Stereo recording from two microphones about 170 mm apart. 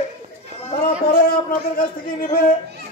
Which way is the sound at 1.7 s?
55° left (ahead or behind).